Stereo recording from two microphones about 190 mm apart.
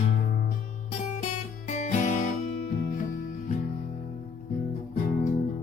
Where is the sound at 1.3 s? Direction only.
40° left (ahead or behind).